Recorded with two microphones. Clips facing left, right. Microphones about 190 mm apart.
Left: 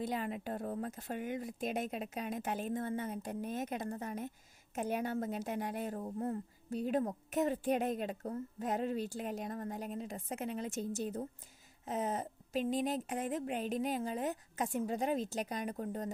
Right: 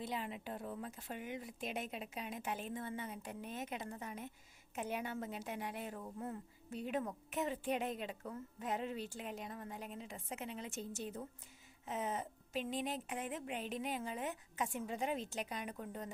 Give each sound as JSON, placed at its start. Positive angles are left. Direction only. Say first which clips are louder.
{"t": 0.0, "sound": "a woman's voice", "louder": "left 6 dB", "side_deg": 45}